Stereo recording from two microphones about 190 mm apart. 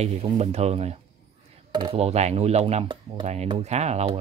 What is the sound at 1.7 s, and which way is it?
Speech, 25° right (ahead or behind).